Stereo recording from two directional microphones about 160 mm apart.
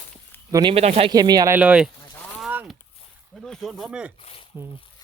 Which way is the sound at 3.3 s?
Centre (ahead or behind).